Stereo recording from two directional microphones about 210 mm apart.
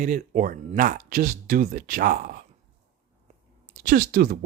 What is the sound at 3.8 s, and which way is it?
Speech, 45° right (ahead or behind).